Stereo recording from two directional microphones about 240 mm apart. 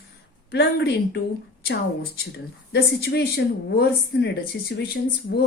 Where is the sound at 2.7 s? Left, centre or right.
Left.